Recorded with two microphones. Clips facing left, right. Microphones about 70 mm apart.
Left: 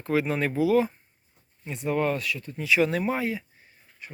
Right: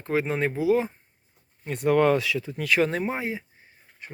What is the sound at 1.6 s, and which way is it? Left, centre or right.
Speech, right.